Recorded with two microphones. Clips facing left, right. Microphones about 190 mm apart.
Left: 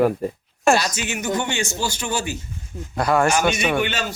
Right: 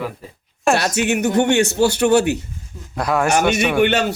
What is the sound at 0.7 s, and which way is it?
A man's voice, 65° right (ahead or behind).